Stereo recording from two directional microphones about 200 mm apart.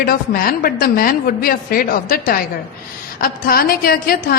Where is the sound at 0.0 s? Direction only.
45° left (ahead or behind).